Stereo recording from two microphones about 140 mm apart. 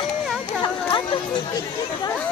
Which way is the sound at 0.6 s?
35° left (ahead or behind).